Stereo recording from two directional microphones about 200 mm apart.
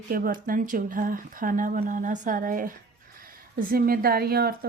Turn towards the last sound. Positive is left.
turn(degrees=-50)  # may be behind; listen again after turning